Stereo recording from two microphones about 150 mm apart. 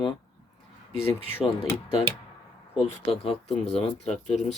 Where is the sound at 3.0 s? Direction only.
40° left (ahead or behind).